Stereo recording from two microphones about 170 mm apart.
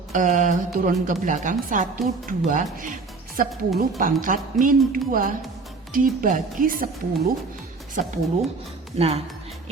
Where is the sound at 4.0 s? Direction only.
50° right (ahead or behind).